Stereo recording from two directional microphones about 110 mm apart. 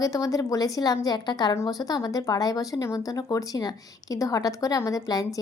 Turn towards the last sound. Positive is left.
turn(degrees=35)  # may be behind; listen again after turning